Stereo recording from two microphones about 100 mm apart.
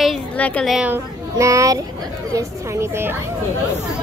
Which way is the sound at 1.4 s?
30° right (ahead or behind).